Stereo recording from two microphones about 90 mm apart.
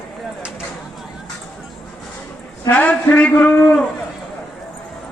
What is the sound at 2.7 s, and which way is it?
Speech, 15° left (ahead or behind).